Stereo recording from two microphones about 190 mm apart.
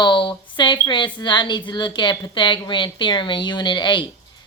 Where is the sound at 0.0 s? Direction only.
25° left (ahead or behind).